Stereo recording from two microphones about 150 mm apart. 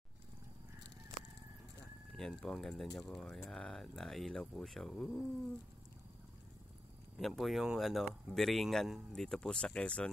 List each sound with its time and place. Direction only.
2.1 s speech: 5° left (ahead or behind)
7.2 s speech: centre (ahead or behind)